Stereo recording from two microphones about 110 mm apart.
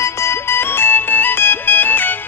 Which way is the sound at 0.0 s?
25° left (ahead or behind).